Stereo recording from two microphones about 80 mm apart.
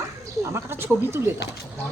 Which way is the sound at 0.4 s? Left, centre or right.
Right.